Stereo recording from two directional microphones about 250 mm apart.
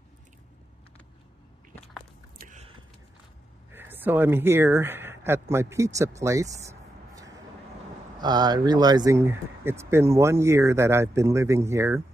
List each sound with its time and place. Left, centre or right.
2.3 s biting: right
3.7 s speech: centre